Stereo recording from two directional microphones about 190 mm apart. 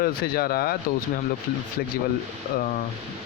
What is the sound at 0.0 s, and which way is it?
Speech, 55° left (ahead or behind).